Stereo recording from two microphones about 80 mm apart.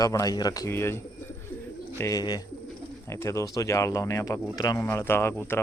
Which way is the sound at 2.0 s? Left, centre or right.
Left.